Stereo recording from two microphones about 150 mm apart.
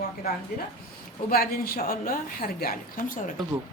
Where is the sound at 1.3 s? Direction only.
85° left.